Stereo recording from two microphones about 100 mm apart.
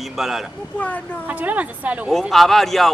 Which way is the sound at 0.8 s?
15° left (ahead or behind).